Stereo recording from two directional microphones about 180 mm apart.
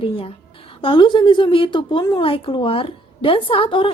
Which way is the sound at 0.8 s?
25° left (ahead or behind).